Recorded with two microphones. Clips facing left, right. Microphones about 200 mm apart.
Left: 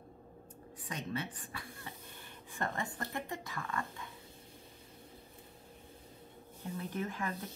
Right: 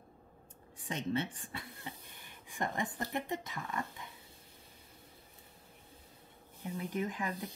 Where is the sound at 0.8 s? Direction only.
25° right (ahead or behind).